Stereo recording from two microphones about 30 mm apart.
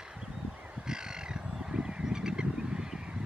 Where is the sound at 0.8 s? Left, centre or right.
Right.